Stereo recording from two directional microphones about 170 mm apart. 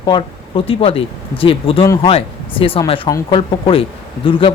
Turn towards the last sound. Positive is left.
turn(degrees=30)  # may be behind; listen again after turning